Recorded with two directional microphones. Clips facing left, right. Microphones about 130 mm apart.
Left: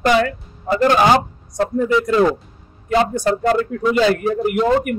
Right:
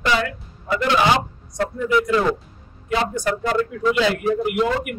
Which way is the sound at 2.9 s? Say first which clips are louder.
Left 5 dB; 40° left (ahead or behind).